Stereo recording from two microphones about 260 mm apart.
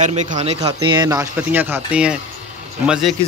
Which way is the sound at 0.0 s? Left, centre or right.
Right.